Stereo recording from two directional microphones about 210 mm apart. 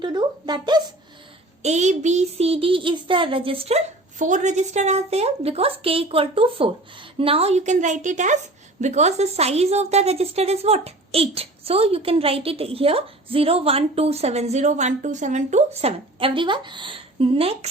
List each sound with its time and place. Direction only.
0.0 s a woman's voice: 20° right (ahead or behind)
1.6 s a woman's voice: 35° right (ahead or behind)